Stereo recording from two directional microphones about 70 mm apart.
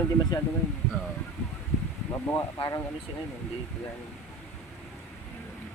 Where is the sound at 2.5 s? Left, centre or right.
Left.